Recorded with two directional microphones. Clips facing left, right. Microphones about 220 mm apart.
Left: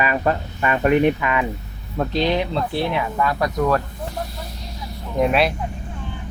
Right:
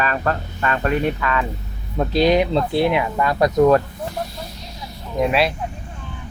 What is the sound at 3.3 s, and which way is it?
Speech, 25° right (ahead or behind).